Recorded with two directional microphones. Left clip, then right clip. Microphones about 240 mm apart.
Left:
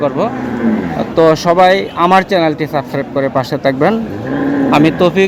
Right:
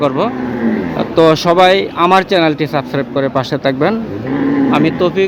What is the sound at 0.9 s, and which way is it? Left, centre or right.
Speech, centre.